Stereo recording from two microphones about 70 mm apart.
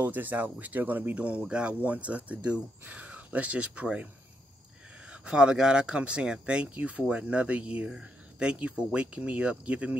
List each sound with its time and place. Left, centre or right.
0.0 s speech: right
5.1 s speech: centre